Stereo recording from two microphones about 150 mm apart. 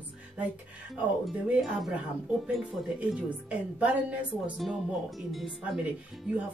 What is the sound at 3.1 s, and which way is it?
Speech, 10° right (ahead or behind).